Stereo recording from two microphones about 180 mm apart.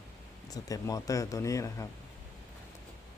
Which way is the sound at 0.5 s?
20° left (ahead or behind).